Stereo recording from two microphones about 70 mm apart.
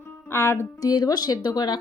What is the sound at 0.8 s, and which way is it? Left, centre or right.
Speech, left.